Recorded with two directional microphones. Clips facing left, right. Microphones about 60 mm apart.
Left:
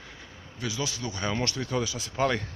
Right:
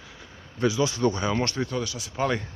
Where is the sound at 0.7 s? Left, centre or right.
Right.